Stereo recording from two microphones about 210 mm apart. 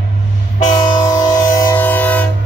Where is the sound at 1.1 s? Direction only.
15° left (ahead or behind).